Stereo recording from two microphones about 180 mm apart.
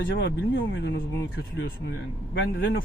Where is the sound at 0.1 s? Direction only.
80° left.